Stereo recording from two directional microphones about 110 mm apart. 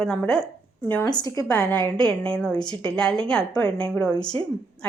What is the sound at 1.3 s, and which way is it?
Speech, 30° left (ahead or behind).